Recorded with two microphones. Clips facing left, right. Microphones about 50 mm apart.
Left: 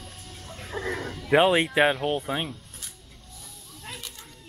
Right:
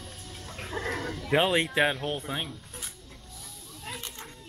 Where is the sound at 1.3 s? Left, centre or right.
Centre.